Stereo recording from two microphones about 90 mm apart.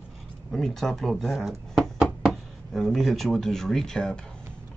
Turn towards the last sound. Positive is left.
turn(degrees=5)  # may be behind; listen again after turning